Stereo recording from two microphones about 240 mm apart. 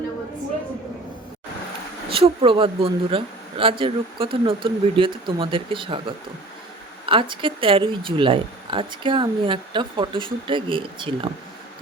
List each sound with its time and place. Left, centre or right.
2.0 s speech: right